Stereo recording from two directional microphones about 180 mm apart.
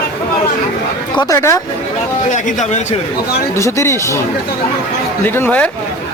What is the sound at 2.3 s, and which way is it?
Speech, 45° left (ahead or behind).